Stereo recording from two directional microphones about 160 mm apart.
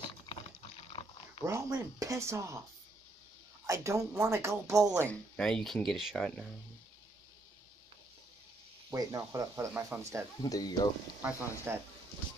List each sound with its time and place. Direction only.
1.4 s speech: 20° right (ahead or behind)
3.6 s a woman's voice: 20° right (ahead or behind)
5.3 s speech: 5° left (ahead or behind)
8.9 s speech: 20° right (ahead or behind)
10.4 s speech: 25° left (ahead or behind)
11.2 s speech: 10° right (ahead or behind)